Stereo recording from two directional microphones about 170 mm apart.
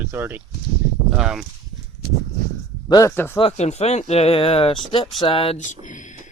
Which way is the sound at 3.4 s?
40° left (ahead or behind).